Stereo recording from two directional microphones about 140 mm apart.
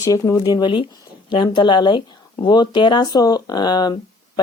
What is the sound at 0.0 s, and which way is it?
Speech, 25° left (ahead or behind).